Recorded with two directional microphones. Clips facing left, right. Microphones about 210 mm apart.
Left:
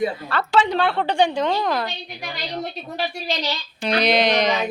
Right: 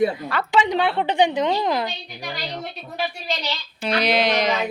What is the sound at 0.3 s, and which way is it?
A woman's voice, 15° right (ahead or behind).